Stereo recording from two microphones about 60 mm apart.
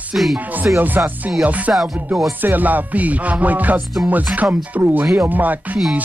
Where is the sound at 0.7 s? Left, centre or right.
Right.